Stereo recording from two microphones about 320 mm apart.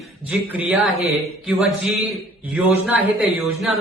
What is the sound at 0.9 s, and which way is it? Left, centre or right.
Speech, centre.